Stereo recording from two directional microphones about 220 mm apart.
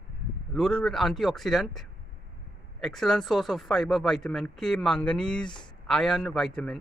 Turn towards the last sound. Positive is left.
turn(degrees=0)  # may be behind; listen again after turning